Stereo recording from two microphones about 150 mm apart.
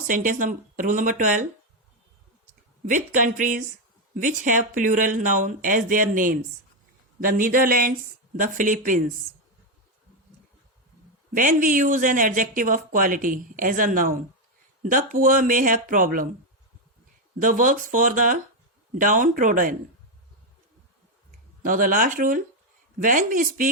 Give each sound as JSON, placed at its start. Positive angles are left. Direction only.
{"t": 0.1, "sound": "speech", "side_deg": -60}
{"t": 2.8, "sound": "speech", "side_deg": -60}
{"t": 11.3, "sound": "speech", "side_deg": -65}
{"t": 17.4, "sound": "speech", "side_deg": -65}
{"t": 21.6, "sound": "speech", "side_deg": -65}